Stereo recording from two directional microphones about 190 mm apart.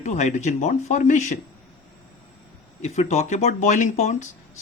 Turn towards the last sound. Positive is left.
turn(degrees=40)  # may be behind; listen again after turning